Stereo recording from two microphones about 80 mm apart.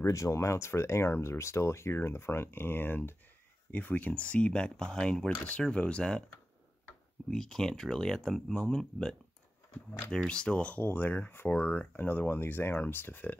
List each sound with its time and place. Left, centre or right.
0.0 s speech: left; by 6.2 s centre
7.2 s speech: centre
10.1 s speech: centre